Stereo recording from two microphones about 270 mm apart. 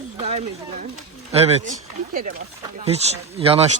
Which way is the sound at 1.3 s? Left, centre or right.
Right.